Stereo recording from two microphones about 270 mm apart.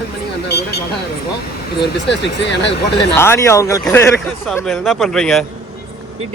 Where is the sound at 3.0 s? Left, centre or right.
Centre.